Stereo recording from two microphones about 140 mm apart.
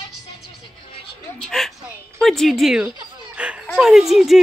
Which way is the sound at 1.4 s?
Centre (ahead or behind).